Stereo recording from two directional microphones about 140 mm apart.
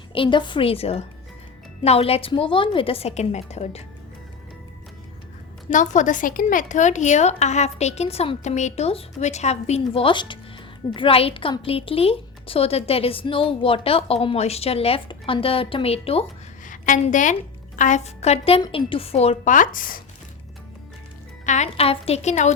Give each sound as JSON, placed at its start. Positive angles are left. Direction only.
{"t": 0.1, "sound": "a woman's voice", "side_deg": 35}
{"t": 5.7, "sound": "a woman's voice", "side_deg": 60}
{"t": 16.6, "sound": "a woman's voice", "side_deg": 65}
{"t": 19.5, "sound": "speech", "side_deg": 70}
{"t": 21.4, "sound": "a woman's voice", "side_deg": 55}